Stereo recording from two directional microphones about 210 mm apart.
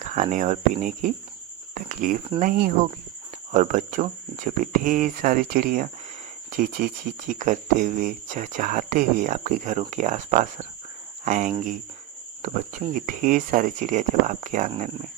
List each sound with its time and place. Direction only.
0.0 s speech: 35° right (ahead or behind)